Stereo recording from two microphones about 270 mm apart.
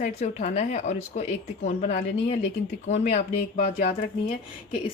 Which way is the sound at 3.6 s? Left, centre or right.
Left.